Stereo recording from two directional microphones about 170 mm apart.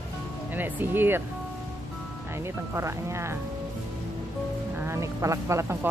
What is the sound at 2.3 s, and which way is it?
Speech, 15° right (ahead or behind).